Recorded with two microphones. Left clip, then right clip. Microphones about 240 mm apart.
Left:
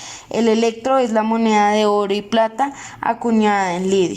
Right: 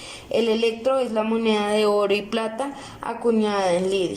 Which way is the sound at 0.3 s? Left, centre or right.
Left.